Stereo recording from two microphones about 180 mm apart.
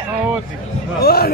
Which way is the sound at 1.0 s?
60° left (ahead or behind).